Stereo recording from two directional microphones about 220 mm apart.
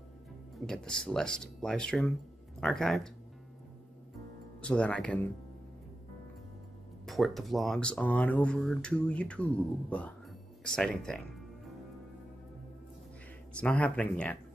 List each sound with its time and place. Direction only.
0.7 s speech: 5° left (ahead or behind)
4.6 s speech: 5° left (ahead or behind)
7.1 s speech: centre (ahead or behind)
13.6 s speech: 5° left (ahead or behind)